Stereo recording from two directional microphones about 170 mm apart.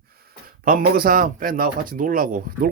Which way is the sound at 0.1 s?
60° right (ahead or behind).